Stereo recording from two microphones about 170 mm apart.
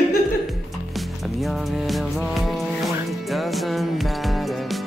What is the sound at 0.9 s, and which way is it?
Music, centre (ahead or behind).